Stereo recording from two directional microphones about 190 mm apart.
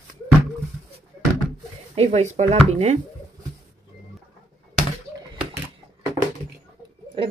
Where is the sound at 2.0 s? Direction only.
35° right (ahead or behind).